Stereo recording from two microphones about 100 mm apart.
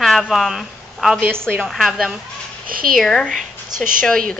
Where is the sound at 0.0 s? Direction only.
Centre (ahead or behind).